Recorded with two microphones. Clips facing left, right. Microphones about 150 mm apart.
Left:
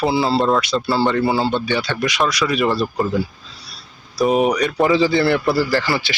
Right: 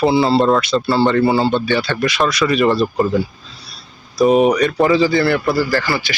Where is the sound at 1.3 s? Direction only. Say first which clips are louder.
Right 3 dB; 15° right (ahead or behind).